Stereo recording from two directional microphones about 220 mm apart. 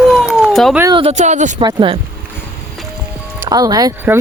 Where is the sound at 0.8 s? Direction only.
20° right (ahead or behind).